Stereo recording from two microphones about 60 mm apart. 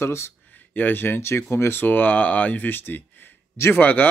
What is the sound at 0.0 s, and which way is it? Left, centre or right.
Speech, left.